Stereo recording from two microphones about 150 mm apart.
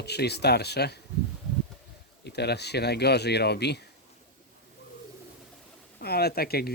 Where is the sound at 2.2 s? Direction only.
90° left.